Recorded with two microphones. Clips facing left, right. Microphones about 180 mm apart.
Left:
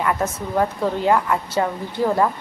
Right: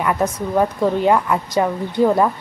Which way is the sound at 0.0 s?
15° right (ahead or behind).